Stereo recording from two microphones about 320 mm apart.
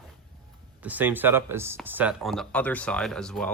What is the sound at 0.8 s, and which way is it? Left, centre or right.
Speech, centre.